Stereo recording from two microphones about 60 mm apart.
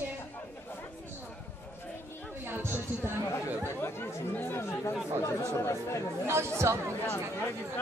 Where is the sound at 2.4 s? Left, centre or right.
Right.